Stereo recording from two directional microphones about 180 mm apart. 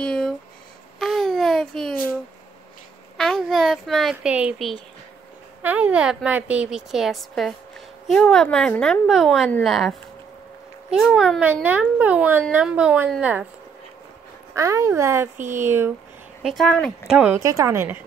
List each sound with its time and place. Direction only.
0.0 s a sound: 5° left (ahead or behind)
0.9 s baby cry: centre (ahead or behind)
3.2 s a child's voice: 5° left (ahead or behind)
14.5 s speech: 15° right (ahead or behind)
16.4 s a woman's voice: 5° left (ahead or behind)
17.1 s speech: 5° right (ahead or behind)
17.4 s speech: 20° right (ahead or behind)